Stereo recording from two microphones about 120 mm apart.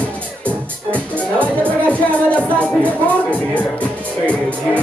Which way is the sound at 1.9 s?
10° left (ahead or behind).